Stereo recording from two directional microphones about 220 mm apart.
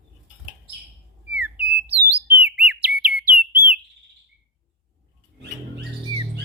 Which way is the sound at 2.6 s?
5° right (ahead or behind).